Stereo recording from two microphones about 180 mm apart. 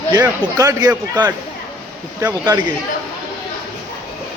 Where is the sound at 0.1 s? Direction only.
20° right (ahead or behind).